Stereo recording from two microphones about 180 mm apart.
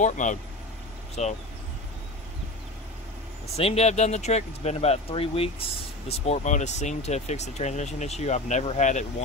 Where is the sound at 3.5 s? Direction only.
35° left (ahead or behind).